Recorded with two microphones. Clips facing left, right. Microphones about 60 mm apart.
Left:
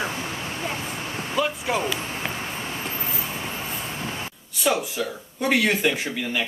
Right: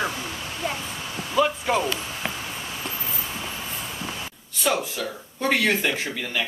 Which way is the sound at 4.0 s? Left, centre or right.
Left.